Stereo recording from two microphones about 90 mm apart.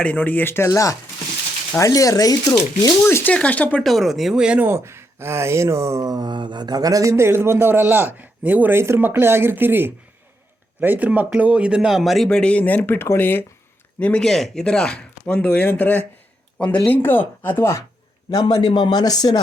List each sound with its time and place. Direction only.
0.0 s speech: 15° left (ahead or behind); by 2.9 s 45° left (ahead or behind)
3.1 s speech: 30° left (ahead or behind)
3.3 s speech: 15° left (ahead or behind)
3.8 s a man's voice: centre (ahead or behind)
4.6 s speech: 30° right (ahead or behind)
6.1 s a man's voice: 50° right (ahead or behind); by 17.8 s 25° left (ahead or behind)
18.3 s a man's voice: 50° left (ahead or behind)